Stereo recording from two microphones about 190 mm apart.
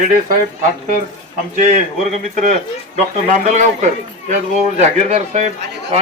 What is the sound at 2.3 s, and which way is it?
A man's voice, 40° right (ahead or behind).